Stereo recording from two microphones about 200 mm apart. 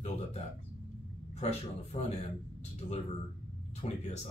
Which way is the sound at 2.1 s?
35° left (ahead or behind).